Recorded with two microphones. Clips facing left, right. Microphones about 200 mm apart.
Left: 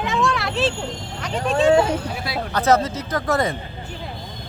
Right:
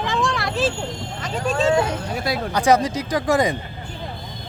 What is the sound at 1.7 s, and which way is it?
Speech, 30° left (ahead or behind).